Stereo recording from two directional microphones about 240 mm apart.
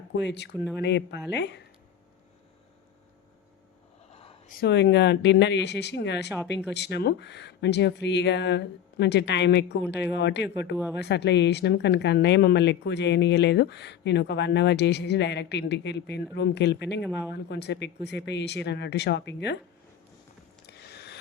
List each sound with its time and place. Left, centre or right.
0.2 s speech: left
4.1 s a sound: left
4.6 s speech: left
17.0 s speech: centre
17.3 s speech: left
20.7 s a sound: left